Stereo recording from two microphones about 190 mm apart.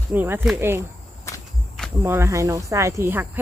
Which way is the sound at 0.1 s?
10° right (ahead or behind).